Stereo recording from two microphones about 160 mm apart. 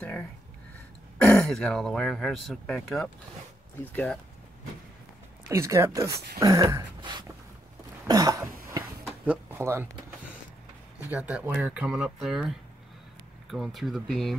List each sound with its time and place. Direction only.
1.1 s speech: 5° left (ahead or behind)
5.5 s speech: 20° right (ahead or behind)
6.4 s a sound: 20° right (ahead or behind)
8.1 s throat clearing: 25° right (ahead or behind)
9.2 s speech: 10° right (ahead or behind)
11.1 s speech: 10° right (ahead or behind)